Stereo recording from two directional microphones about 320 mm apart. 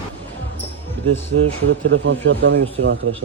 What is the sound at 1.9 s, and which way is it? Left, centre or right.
Speech, right.